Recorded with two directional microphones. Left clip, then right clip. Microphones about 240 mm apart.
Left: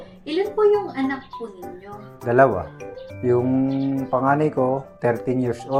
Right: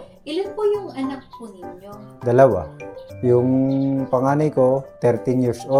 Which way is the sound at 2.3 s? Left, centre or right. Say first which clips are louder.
Right 2 dB; right.